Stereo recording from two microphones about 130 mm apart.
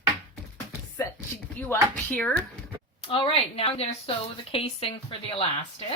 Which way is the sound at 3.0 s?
45° left (ahead or behind).